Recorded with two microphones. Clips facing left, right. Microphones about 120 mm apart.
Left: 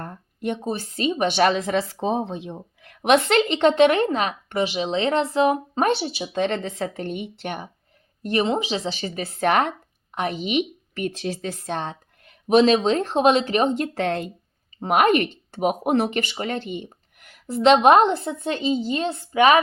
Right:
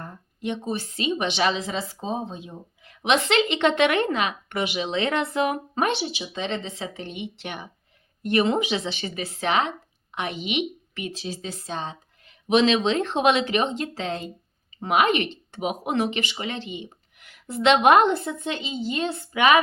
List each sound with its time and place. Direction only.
0.0 s a woman's voice: 55° left (ahead or behind)
8.2 s speech: 35° left (ahead or behind); by 9.7 s 50° left (ahead or behind)
10.2 s a woman's voice: 40° left (ahead or behind); by 14.3 s 60° left (ahead or behind)
14.8 s a woman's voice: 45° left (ahead or behind)